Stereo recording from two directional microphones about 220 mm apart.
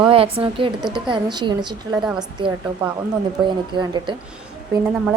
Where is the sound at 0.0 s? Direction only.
25° right (ahead or behind).